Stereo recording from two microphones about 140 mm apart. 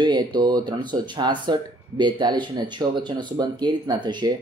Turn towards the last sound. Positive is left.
turn(degrees=-30)  # may be behind; listen again after turning